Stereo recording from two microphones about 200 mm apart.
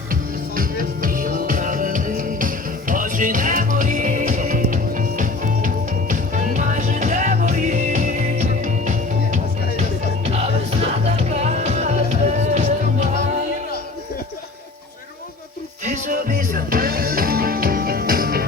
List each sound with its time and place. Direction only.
0.1 s music: 45° right (ahead or behind)
15.8 s music: 40° right (ahead or behind)